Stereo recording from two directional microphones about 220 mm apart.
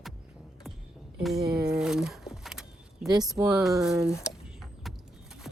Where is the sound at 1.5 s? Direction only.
5° right (ahead or behind).